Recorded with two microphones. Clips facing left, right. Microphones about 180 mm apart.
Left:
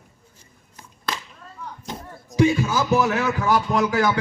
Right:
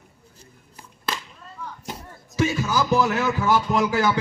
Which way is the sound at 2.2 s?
15° left (ahead or behind).